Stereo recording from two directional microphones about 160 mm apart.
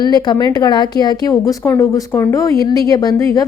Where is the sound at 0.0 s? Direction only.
25° left (ahead or behind).